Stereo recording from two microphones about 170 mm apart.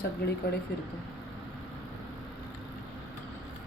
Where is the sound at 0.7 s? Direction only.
65° left (ahead or behind).